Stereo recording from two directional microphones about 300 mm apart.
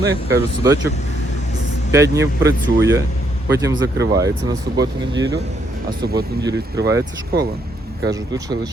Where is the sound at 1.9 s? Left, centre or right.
Centre.